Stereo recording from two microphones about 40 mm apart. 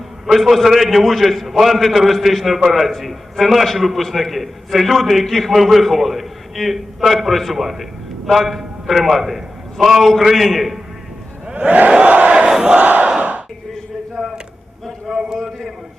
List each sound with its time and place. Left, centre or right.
0.3 s a man's voice: centre
11.4 s crowd: right
12.5 s battle cry: centre
15.0 s a sound: centre